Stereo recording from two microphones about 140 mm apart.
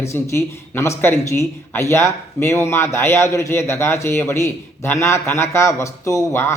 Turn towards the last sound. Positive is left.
turn(degrees=20)  # may be behind; listen again after turning